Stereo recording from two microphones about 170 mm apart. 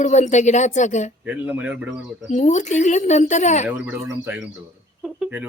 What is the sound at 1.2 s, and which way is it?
Speech, 10° right (ahead or behind).